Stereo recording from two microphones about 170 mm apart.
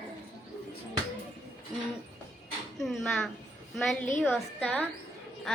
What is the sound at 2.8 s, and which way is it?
A child's voice, centre (ahead or behind).